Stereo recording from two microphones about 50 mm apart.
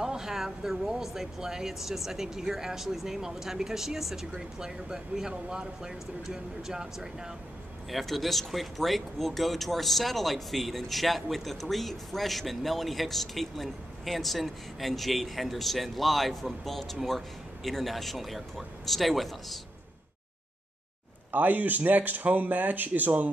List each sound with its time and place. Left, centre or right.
0.0 s speech: centre
7.9 s speech: centre
21.3 s speech: right